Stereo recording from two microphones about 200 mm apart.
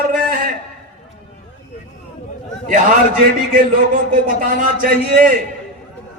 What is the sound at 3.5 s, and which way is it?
A man's voice, 45° right (ahead or behind).